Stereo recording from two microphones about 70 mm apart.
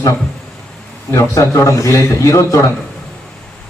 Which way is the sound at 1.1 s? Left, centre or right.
Left.